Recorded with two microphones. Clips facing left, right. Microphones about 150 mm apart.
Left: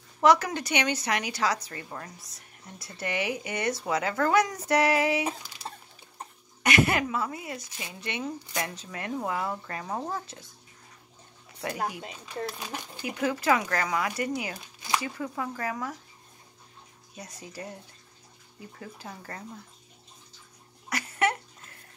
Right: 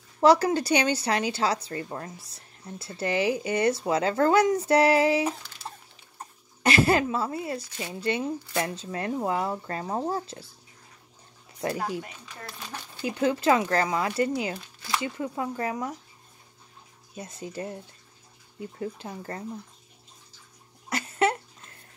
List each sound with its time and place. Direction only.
0.2 s a woman's voice: 30° right (ahead or behind)
6.6 s a woman's voice: 30° right (ahead or behind)
11.6 s a woman's voice: 30° right (ahead or behind)
12.0 s speech: 15° left (ahead or behind)
13.0 s speech: 30° right (ahead or behind)
17.1 s speech: 25° right (ahead or behind)
20.9 s a sound: 25° right (ahead or behind)